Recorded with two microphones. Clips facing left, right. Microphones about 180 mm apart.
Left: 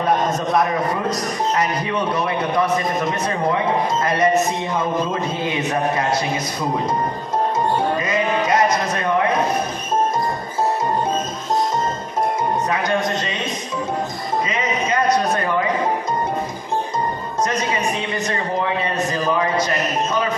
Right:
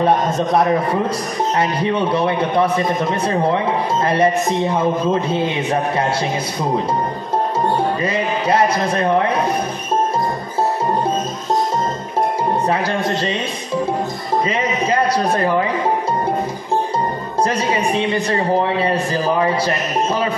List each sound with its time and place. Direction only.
1.6 s a man's voice: 30° right (ahead or behind)
8.0 s a man's voice: 30° right (ahead or behind)
12.6 s a man's voice: 30° right (ahead or behind)
14.5 s a sound: 30° right (ahead or behind)
17.4 s a man's voice: 30° right (ahead or behind)